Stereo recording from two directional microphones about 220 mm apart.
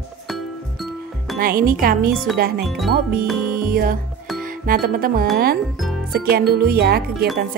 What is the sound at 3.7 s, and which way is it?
Speech, 40° right (ahead or behind).